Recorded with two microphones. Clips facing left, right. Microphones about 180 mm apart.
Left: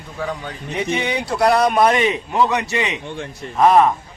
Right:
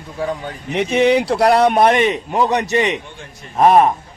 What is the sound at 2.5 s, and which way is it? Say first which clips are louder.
Speech: right 5 dB; 40° right (ahead or behind).